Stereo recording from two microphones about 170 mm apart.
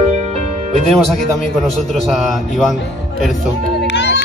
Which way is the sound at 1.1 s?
Centre (ahead or behind).